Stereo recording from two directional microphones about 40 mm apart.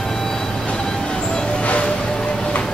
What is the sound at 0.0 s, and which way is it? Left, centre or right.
Vehicle, centre.